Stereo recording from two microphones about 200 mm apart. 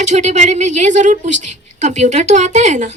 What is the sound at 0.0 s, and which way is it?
Speech, 35° right (ahead or behind).